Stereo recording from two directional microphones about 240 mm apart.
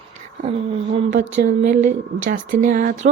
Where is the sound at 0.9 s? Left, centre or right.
Right.